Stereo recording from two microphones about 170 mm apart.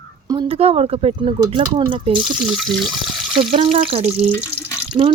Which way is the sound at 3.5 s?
35° right (ahead or behind).